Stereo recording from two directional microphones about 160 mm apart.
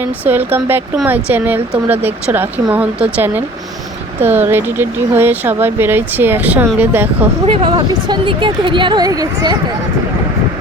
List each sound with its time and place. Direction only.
0.0 s speech: 10° right (ahead or behind)
7.4 s speech: 30° right (ahead or behind)